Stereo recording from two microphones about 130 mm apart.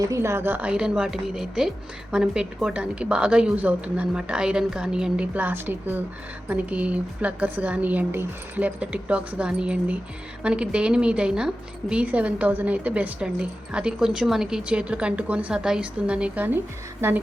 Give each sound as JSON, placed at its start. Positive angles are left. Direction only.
{"t": 0.0, "sound": "a woman's voice", "side_deg": -25}